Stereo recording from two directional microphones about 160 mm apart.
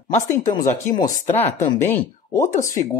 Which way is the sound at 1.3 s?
45° left (ahead or behind).